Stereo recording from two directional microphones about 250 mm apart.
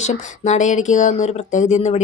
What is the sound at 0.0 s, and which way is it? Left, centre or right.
Speech, left.